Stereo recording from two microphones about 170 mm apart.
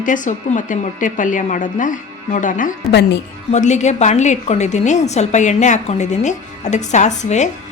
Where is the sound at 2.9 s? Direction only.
85° left.